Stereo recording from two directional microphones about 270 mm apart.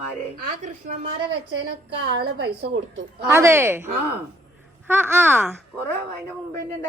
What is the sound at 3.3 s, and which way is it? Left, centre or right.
A woman's voice, centre.